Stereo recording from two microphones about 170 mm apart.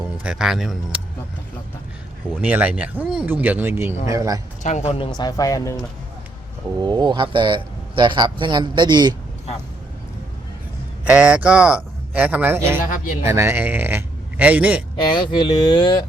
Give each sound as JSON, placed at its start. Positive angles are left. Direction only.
{"t": 0.2, "sound": "a man's voice", "side_deg": -5}
{"t": 2.4, "sound": "speech", "side_deg": -10}
{"t": 4.6, "sound": "speech", "side_deg": 40}
{"t": 6.7, "sound": "a man's voice", "side_deg": -25}
{"t": 11.0, "sound": "a man's voice", "side_deg": -5}
{"t": 15.1, "sound": "speech", "side_deg": 25}